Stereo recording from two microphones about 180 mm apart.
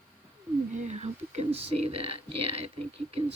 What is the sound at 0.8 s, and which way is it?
Speech, 35° right (ahead or behind).